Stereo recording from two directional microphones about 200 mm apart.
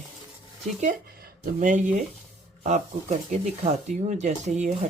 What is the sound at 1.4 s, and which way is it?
Speech, 40° right (ahead or behind).